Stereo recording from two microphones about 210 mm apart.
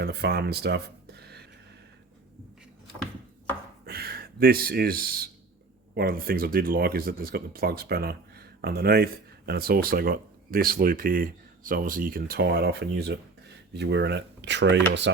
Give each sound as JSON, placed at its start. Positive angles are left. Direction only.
{"t": 0.0, "sound": "speech", "side_deg": -50}
{"t": 3.8, "sound": "speech", "side_deg": -45}